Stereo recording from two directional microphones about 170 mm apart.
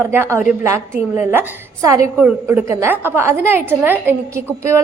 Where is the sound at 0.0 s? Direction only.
15° right (ahead or behind).